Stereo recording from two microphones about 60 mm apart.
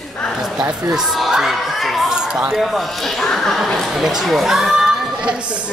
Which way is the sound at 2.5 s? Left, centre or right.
Centre.